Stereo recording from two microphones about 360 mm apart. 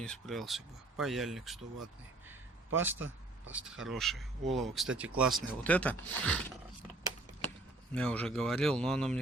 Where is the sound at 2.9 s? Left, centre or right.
Right.